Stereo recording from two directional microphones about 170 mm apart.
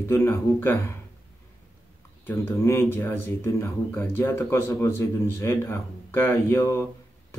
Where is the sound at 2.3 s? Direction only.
15° left (ahead or behind).